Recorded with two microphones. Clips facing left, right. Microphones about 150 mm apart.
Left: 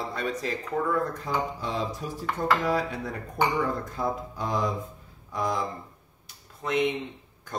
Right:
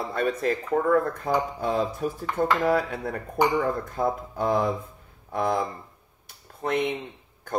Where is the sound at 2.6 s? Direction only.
55° right (ahead or behind).